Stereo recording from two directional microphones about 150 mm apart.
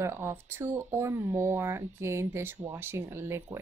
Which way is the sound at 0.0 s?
15° right (ahead or behind).